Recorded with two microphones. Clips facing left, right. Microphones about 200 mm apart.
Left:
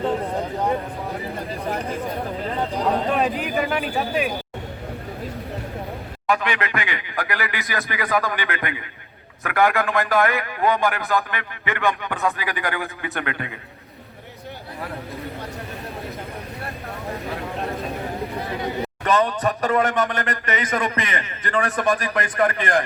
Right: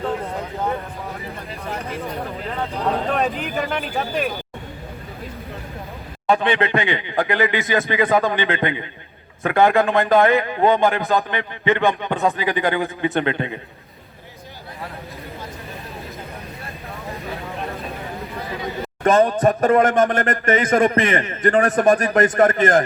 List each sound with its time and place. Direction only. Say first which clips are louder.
3.2 s speech: even; 5° left (ahead or behind)
6.2 s a man's voice: right 5 dB; 30° right (ahead or behind)
19.0 s a man's voice: right 6 dB; 45° right (ahead or behind)